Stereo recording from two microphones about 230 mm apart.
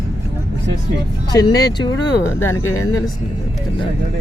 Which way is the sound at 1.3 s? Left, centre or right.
Centre.